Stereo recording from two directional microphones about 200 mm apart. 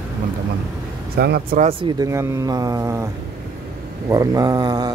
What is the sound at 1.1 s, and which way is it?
Speech, 50° right (ahead or behind).